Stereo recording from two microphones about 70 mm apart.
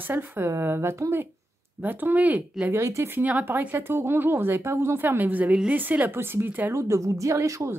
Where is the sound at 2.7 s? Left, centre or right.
Right.